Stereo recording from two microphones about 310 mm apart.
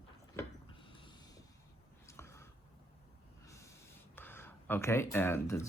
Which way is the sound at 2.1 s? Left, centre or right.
Centre.